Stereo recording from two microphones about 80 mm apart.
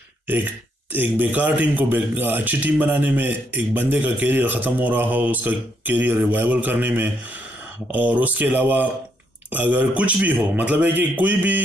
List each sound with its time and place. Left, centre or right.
0.9 s a man's voice: right